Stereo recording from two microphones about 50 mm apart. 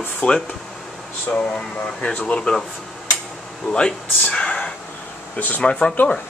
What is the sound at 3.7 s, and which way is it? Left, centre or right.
Speech, centre.